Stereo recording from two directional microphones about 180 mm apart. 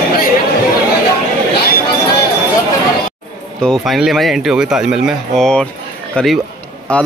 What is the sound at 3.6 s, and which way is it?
A man's voice, centre (ahead or behind).